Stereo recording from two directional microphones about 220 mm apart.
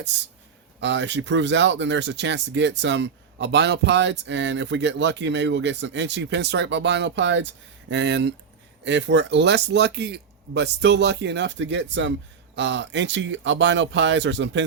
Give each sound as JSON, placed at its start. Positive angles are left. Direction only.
{"t": 0.1, "sound": "speech", "side_deg": -55}